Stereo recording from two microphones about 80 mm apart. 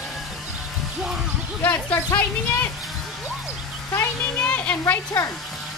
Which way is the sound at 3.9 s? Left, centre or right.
Left.